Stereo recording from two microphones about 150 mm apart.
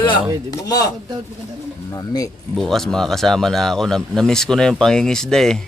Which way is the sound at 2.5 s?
Centre (ahead or behind).